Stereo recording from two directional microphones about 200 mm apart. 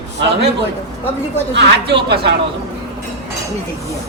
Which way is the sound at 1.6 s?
60° right (ahead or behind).